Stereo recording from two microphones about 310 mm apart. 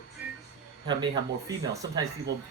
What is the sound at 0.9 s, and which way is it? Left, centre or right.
Speech, centre.